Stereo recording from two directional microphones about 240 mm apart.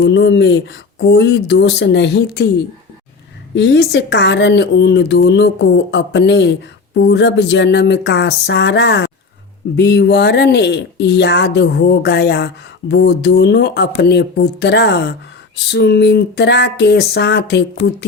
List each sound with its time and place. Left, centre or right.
0.0 s speech: left
3.5 s speech: left